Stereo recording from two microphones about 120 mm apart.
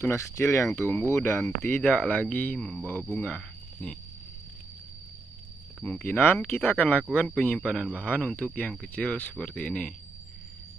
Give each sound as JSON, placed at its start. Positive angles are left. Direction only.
{"t": 0.0, "sound": "speech", "side_deg": 20}
{"t": 5.9, "sound": "speech", "side_deg": 15}